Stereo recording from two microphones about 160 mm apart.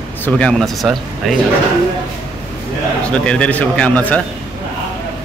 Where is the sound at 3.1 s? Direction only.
5° left (ahead or behind).